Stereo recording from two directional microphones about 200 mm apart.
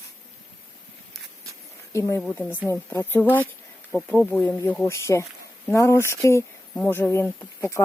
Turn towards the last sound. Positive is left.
turn(degrees=10)  # may be behind; listen again after turning